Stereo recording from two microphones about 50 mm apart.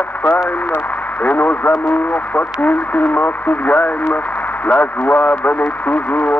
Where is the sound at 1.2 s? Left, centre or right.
Left.